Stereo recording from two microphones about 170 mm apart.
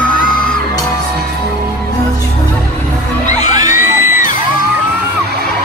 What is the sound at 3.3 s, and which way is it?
Music, 45° left (ahead or behind).